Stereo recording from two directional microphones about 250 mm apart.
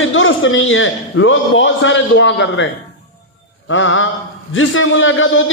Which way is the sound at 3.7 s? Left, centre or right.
Left.